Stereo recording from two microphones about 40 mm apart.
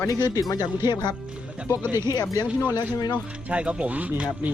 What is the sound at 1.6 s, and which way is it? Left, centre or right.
Speech, right.